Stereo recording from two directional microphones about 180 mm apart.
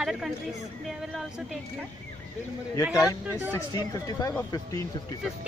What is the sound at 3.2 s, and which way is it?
Speech, 10° right (ahead or behind).